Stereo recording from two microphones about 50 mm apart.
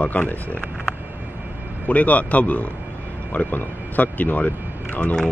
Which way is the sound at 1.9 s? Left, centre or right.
Left.